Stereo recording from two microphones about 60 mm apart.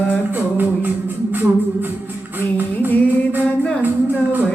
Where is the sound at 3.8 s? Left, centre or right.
Right.